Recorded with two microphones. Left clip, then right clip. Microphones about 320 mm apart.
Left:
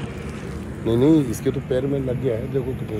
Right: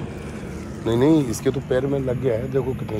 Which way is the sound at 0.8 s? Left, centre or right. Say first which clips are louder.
Left 1 dB; centre.